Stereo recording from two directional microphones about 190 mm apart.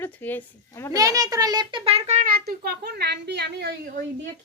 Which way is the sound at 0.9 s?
20° right (ahead or behind).